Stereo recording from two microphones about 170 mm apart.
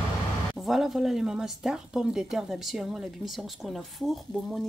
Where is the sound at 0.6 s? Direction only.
Centre (ahead or behind).